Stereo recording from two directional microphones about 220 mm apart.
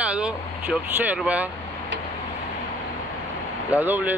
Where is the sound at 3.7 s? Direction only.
10° right (ahead or behind).